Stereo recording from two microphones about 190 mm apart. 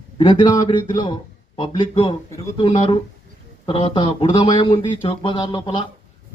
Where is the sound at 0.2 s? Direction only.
25° left (ahead or behind).